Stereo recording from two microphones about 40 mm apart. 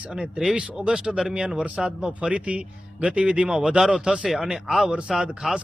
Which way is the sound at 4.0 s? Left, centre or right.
Right.